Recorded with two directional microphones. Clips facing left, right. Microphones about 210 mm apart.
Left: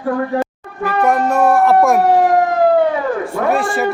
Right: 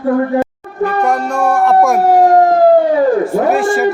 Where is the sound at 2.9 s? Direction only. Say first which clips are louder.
Right 8 dB; 35° right (ahead or behind).